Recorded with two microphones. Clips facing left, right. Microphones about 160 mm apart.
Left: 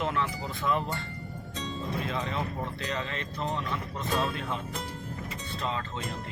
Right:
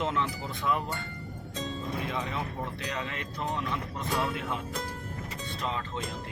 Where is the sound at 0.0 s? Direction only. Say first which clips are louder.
Even; 20° right (ahead or behind).